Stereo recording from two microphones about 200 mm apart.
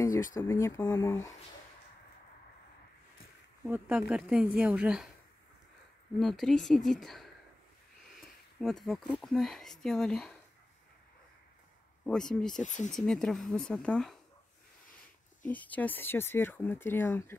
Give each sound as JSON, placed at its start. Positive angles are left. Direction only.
{"t": 0.0, "sound": "speech", "side_deg": 15}
{"t": 3.6, "sound": "speech", "side_deg": -10}
{"t": 6.1, "sound": "speech", "side_deg": 0}
{"t": 12.1, "sound": "speech", "side_deg": 5}
{"t": 12.6, "sound": "speech", "side_deg": 40}
{"t": 12.9, "sound": "speech", "side_deg": 5}
{"t": 15.4, "sound": "speech", "side_deg": 10}